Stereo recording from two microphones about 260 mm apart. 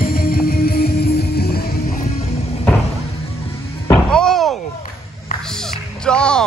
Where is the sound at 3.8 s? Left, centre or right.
Centre.